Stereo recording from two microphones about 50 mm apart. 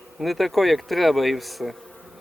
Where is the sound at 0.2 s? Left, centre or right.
Centre.